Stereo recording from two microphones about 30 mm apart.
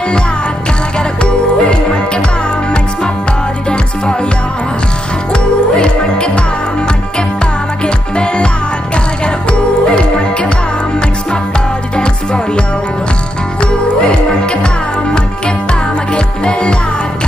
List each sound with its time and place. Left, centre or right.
0.9 s music: left
3.6 s music: left
5.3 s music: left
7.8 s music: left
12.0 s music: left
14.4 s music: left
16.1 s music: left